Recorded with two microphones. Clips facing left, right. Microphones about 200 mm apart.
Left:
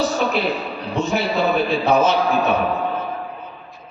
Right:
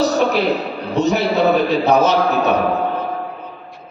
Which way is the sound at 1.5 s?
40° right (ahead or behind).